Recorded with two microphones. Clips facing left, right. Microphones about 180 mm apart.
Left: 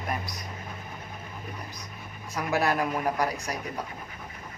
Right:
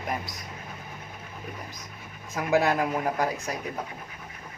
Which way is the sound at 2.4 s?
20° right (ahead or behind).